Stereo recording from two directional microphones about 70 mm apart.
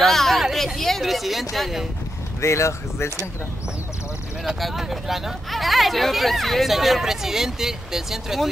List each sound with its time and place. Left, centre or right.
0.0 s a sound: centre
2.4 s speech: left
4.5 s speech: centre